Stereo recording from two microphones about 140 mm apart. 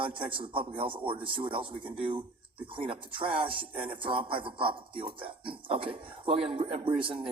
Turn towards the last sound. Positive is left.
turn(degrees=-40)  # may be behind; listen again after turning